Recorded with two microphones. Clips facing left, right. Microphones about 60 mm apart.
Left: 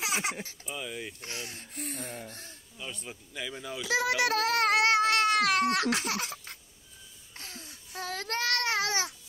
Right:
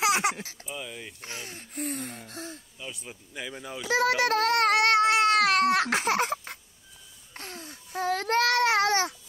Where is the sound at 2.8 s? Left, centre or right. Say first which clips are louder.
Left 2 dB; centre.